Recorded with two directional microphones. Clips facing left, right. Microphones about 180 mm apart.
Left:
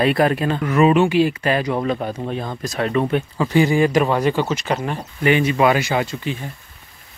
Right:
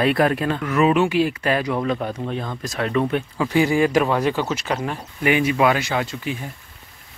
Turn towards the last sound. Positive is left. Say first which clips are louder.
# left 2 dB
turn(degrees=-10)  # may be behind; listen again after turning